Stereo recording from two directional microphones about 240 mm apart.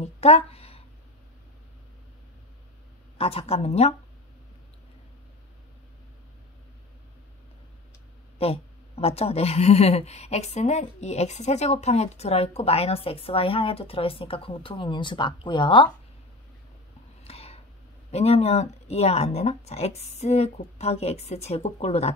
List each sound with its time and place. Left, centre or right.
0.0 s speech: left
3.2 s speech: left
8.4 s speech: left
17.2 s a sound: left
18.1 s speech: left